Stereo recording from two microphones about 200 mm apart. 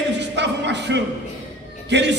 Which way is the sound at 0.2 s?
60° right (ahead or behind).